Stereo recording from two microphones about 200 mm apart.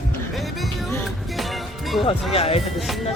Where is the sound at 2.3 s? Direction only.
30° left (ahead or behind).